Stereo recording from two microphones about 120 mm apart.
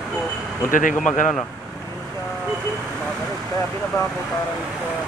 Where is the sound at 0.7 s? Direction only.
90° left.